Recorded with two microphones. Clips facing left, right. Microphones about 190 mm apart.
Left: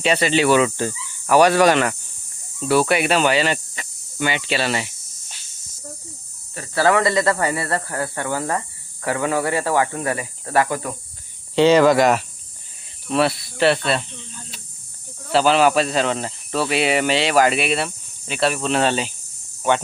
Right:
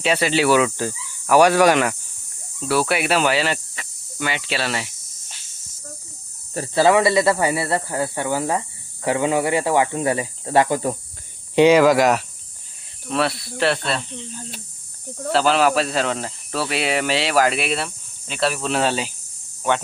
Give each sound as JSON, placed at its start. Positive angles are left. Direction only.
{"t": 0.0, "sound": "speech", "side_deg": -5}
{"t": 2.6, "sound": "cricket", "side_deg": 0}
{"t": 6.7, "sound": "speech", "side_deg": -15}
{"t": 11.5, "sound": "speech", "side_deg": -10}
{"t": 15.3, "sound": "speech", "side_deg": 0}